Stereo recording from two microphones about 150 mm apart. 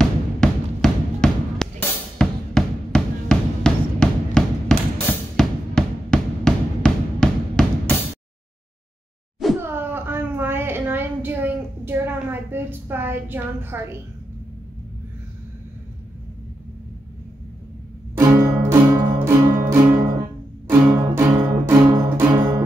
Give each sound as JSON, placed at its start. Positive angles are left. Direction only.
{"t": 0.0, "sound": "music", "side_deg": 5}
{"t": 9.6, "sound": "a sound", "side_deg": -15}
{"t": 18.1, "sound": "music", "side_deg": -15}